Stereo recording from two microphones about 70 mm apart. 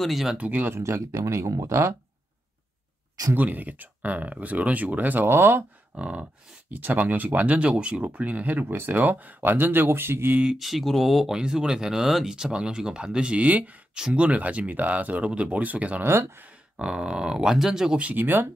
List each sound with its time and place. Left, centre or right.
0.0 s speech: centre
0.4 s speech: right
0.7 s speech: right
3.3 s speech: right
5.9 s speech: centre; by 10.4 s right
10.4 s speech: centre; by 16.1 s right
16.1 s speech: right
16.7 s speech: centre
17.9 s speech: right